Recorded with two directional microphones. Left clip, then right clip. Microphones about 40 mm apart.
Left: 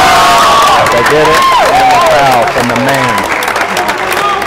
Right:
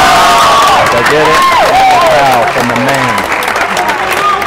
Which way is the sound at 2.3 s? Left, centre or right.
Left.